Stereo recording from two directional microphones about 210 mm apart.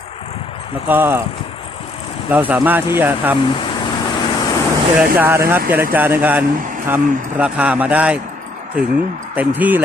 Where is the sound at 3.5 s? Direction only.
25° left (ahead or behind).